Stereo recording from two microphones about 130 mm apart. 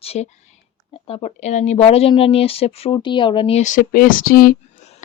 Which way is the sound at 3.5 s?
75° left (ahead or behind).